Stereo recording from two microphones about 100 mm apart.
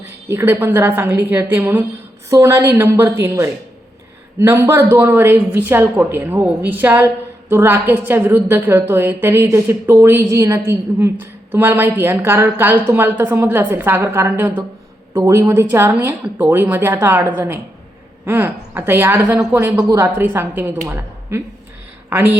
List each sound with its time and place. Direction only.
0.3 s a woman's voice: 20° right (ahead or behind)
19.7 s speech: 35° right (ahead or behind)
20.1 s a woman's voice: 20° right (ahead or behind)
22.1 s a woman's voice: 15° right (ahead or behind)